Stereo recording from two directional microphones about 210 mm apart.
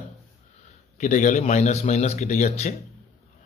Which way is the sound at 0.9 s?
35° left (ahead or behind).